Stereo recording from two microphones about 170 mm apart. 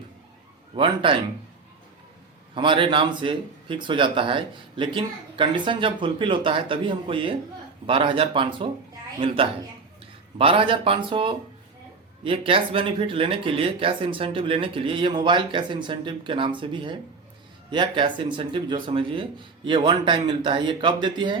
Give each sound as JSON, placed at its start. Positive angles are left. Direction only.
{"t": 0.8, "sound": "speech", "side_deg": -30}
{"t": 2.6, "sound": "speech", "side_deg": -30}